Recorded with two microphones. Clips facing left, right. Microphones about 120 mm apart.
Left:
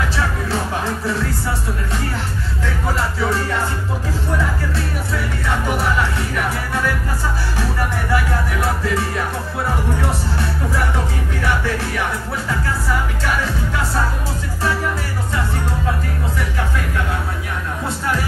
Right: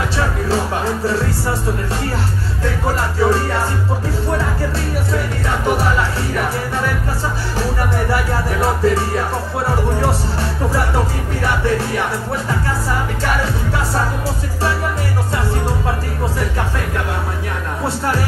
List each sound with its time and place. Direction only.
8.5 s music: 35° right (ahead or behind)